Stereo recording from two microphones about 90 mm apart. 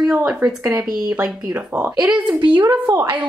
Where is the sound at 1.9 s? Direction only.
10° right (ahead or behind).